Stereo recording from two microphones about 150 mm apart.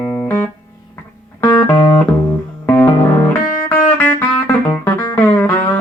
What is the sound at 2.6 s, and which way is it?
Music, 15° left (ahead or behind).